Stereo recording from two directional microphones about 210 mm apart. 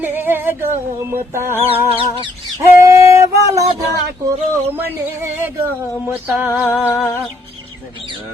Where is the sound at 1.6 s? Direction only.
25° right (ahead or behind).